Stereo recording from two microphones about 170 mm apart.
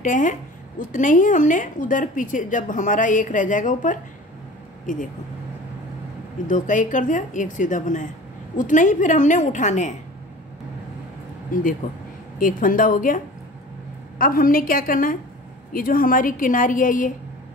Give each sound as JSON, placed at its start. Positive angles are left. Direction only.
{"t": 0.0, "sound": "speech", "side_deg": 50}
{"t": 6.4, "sound": "speech", "side_deg": 50}
{"t": 11.5, "sound": "a woman's voice", "side_deg": 50}